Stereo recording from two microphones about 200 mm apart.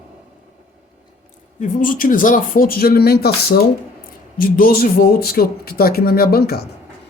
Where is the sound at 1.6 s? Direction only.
40° left (ahead or behind).